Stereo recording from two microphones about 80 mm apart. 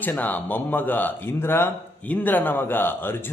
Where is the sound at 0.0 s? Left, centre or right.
Left.